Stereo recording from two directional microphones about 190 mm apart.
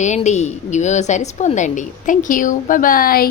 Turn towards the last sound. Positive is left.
turn(degrees=50)  # may be behind; listen again after turning